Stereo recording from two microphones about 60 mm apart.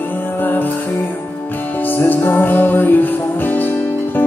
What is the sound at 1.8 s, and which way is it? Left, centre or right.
Music, left.